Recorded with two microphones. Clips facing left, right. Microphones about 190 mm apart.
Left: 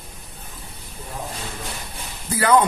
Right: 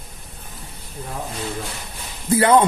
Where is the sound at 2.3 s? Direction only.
25° right (ahead or behind).